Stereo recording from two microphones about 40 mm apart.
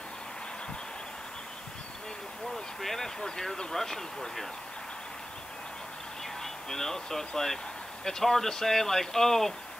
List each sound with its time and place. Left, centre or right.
2.5 s a sound: centre
3.2 s speech: centre
6.4 s speech: centre